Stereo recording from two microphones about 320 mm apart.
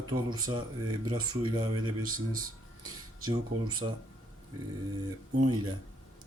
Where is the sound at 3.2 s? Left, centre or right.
Right.